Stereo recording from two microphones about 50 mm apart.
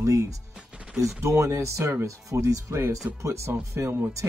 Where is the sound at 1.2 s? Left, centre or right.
Right.